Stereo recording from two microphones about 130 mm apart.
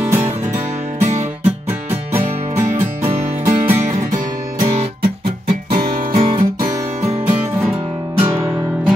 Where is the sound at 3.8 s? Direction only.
75° right (ahead or behind).